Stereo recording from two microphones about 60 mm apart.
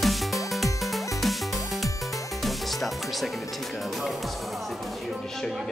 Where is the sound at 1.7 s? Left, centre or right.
Centre.